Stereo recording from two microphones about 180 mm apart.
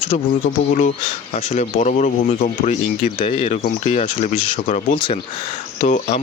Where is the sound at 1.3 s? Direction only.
40° left (ahead or behind).